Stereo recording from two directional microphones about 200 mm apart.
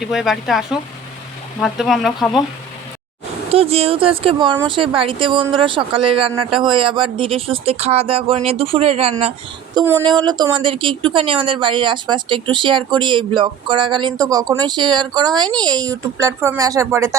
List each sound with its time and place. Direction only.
0.0 s speech: centre (ahead or behind)
3.5 s speech: 30° right (ahead or behind)
9.7 s speech: 10° right (ahead or behind)
10.0 s speech: 25° right (ahead or behind)